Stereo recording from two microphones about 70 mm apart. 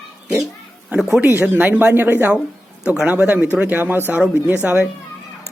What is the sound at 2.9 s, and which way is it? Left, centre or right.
Speech, centre.